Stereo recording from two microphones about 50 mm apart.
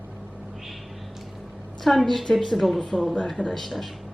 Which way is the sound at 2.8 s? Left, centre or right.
Centre.